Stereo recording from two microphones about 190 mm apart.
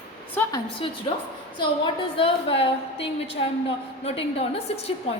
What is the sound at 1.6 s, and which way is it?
A woman's voice, 25° left (ahead or behind).